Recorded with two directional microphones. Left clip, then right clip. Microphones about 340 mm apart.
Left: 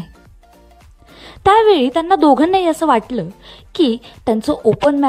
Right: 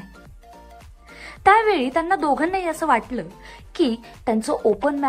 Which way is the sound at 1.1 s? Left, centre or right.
Left.